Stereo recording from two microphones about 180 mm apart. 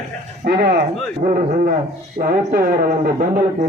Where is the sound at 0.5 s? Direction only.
40° right (ahead or behind).